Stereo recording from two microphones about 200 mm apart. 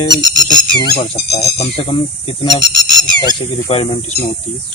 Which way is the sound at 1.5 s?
30° left (ahead or behind).